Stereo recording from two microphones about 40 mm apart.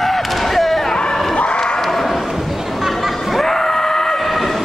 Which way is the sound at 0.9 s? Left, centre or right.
Centre.